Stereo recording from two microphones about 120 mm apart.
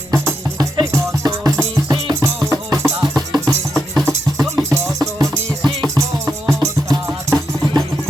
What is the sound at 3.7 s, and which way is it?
Music, centre (ahead or behind).